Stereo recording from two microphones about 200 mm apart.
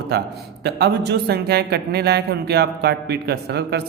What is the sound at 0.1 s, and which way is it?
Speech, 50° right (ahead or behind).